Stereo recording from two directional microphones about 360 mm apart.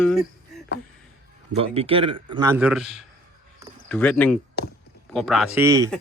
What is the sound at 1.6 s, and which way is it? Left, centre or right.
Speech, centre.